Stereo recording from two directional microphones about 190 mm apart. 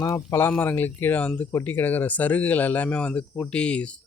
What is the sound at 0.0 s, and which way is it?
Speech, 20° left (ahead or behind).